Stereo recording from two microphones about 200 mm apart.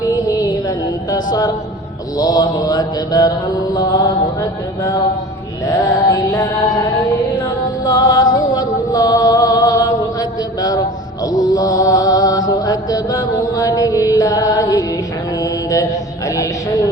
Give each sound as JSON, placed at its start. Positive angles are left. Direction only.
{"t": 1.1, "sound": "mantra", "side_deg": 20}
{"t": 5.6, "sound": "mantra", "side_deg": 15}
{"t": 7.9, "sound": "music", "side_deg": 15}
{"t": 15.4, "sound": "mantra", "side_deg": 15}